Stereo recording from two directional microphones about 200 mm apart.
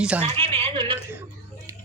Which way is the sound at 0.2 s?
25° right (ahead or behind).